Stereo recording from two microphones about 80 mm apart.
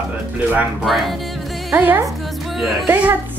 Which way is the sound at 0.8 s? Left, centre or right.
Centre.